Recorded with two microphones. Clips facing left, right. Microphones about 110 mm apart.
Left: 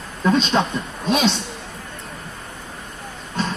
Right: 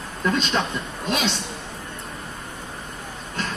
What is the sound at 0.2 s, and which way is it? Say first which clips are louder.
Speech: left 5 dB; 20° left (ahead or behind).